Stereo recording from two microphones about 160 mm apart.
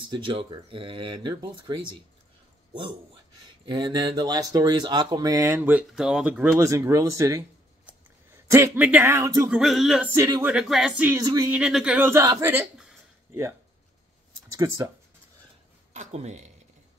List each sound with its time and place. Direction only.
0.1 s speech: 30° right (ahead or behind)
3.6 s speech: 30° right (ahead or behind); by 6.5 s 10° right (ahead or behind)
6.6 s speech: 20° right (ahead or behind)
8.5 s speech: 15° right (ahead or behind)
9.5 s a sound: centre (ahead or behind)
10.1 s speech: 15° right (ahead or behind)
10.5 s a sound: 5° right (ahead or behind)
11.1 s speech: 20° right (ahead or behind)
11.5 s speech: 5° right (ahead or behind)
15.9 s speech: 45° right (ahead or behind)